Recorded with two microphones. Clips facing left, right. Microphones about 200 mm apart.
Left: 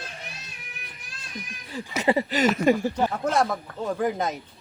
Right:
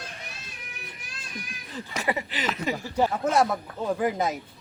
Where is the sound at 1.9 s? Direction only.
25° left (ahead or behind).